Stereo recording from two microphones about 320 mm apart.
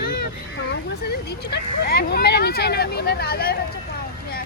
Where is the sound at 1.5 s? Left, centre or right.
Left.